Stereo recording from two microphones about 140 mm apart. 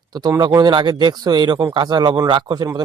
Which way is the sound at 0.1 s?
25° right (ahead or behind).